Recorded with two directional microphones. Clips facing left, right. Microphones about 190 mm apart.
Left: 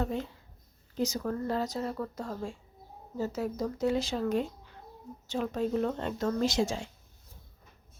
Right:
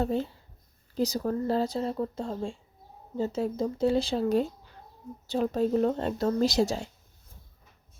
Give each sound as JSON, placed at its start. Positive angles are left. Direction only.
{"t": 0.0, "sound": "speech", "side_deg": -35}